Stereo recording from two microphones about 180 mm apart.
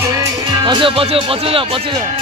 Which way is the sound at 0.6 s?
25° right (ahead or behind).